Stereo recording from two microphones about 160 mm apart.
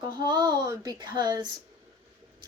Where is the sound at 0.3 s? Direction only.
25° right (ahead or behind).